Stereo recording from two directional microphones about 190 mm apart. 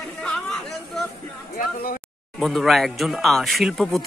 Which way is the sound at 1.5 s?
50° left (ahead or behind).